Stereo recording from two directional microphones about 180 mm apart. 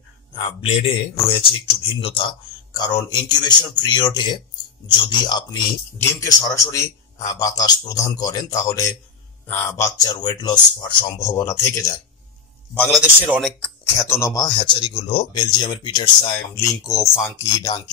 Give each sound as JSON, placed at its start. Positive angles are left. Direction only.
{"t": 0.4, "sound": "a man's voice", "side_deg": 30}
{"t": 13.0, "sound": "speech", "side_deg": -10}
{"t": 14.0, "sound": "speech", "side_deg": 15}